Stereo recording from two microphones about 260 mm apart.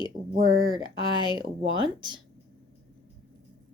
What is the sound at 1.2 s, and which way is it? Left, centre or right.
Speech, centre.